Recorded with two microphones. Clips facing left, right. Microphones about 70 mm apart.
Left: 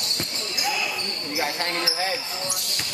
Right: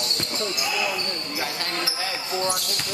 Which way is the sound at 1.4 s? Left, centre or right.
Left.